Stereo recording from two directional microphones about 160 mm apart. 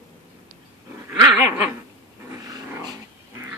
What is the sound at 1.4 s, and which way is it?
Dog, 15° right (ahead or behind).